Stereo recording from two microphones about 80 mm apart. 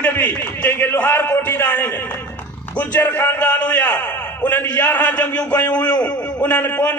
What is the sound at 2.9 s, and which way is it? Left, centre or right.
A man's voice, left.